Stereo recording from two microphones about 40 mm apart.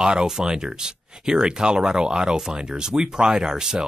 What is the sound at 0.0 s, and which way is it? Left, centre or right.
Speech, centre.